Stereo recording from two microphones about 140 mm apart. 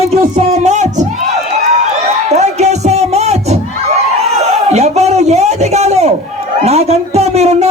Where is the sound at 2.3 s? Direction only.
50° right (ahead or behind).